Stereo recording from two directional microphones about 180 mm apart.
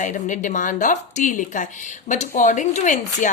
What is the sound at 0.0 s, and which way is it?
A woman's voice, 45° left (ahead or behind).